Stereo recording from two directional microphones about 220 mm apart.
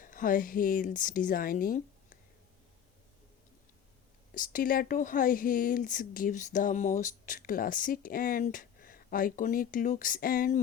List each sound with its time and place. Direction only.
0.0 s speech: 40° left (ahead or behind)
4.4 s speech: 40° left (ahead or behind)